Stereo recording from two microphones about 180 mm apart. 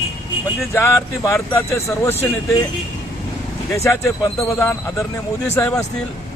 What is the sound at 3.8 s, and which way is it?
Speech, 15° left (ahead or behind).